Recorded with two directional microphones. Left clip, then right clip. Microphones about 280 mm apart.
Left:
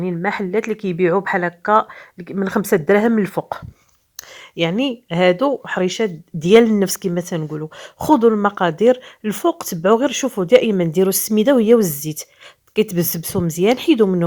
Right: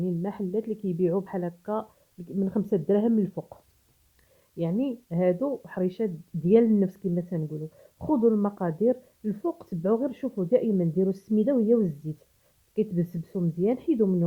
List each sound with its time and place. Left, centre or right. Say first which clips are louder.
0.2 s a woman's voice: left 11 dB; centre
0.7 s a woman's voice: left 10 dB; left
1.2 s a woman's voice: left 14 dB; centre
4.5 s a woman's voice: left 10 dB; centre
8.2 s a woman's voice: left 10 dB; centre